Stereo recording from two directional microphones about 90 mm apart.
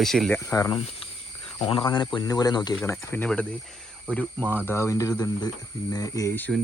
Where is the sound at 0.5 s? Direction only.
30° left (ahead or behind).